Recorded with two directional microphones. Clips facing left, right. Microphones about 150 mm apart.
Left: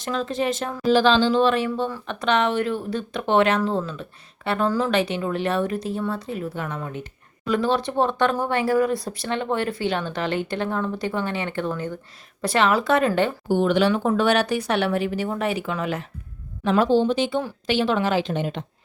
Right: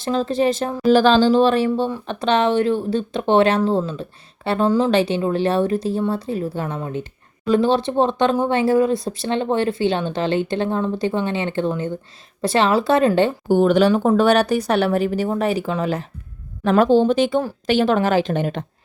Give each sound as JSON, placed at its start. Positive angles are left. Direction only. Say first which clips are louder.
{"t": 0.0, "sound": "speech", "louder": "right 6 dB", "side_deg": -30}
{"t": 0.9, "sound": "speech", "louder": "right 4 dB", "side_deg": -45}
{"t": 13.5, "sound": "speech", "louder": "right 5 dB", "side_deg": -45}
{"t": 16.6, "sound": "a woman's voice", "louder": "right 4 dB", "side_deg": -55}